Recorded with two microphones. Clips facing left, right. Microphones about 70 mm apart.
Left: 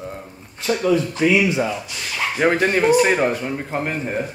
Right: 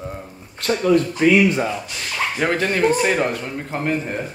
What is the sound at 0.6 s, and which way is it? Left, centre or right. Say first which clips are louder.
Speech: even; right.